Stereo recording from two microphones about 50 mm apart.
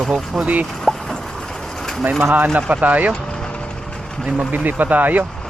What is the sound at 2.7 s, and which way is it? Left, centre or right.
Speech, right.